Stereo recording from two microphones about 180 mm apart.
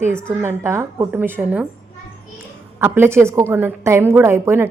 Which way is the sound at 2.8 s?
15° right (ahead or behind).